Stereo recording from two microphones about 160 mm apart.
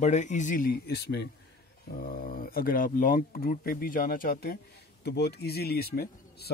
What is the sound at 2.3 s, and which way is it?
Speech, 65° left (ahead or behind).